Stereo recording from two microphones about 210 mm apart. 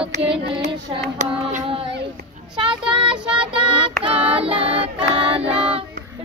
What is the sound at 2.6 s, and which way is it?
Child singing, 25° right (ahead or behind).